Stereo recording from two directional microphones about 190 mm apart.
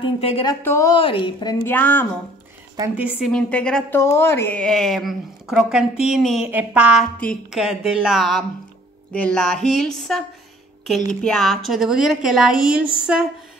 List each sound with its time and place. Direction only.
0.0 s speech: 30° left (ahead or behind)
0.5 s a woman's voice: 15° left (ahead or behind)
0.9 s a woman's voice: 25° left (ahead or behind); by 2.0 s 10° left (ahead or behind)
3.0 s a woman's voice: 5° right (ahead or behind)
3.3 s a woman's voice: 5° left (ahead or behind)